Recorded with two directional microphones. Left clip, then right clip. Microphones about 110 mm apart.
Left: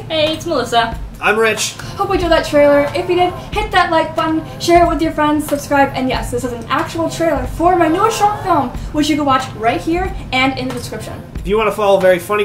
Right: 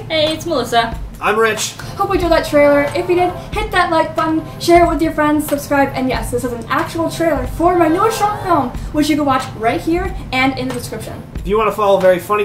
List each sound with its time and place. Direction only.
0.5 s a woman's voice: 20° right (ahead or behind)
1.2 s speech: centre (ahead or behind)